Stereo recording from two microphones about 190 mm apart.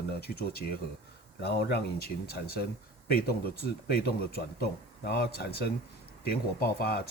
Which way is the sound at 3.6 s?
55° left (ahead or behind).